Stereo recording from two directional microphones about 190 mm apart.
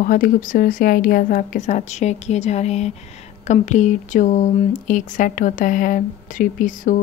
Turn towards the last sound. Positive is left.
turn(degrees=45)  # may be behind; listen again after turning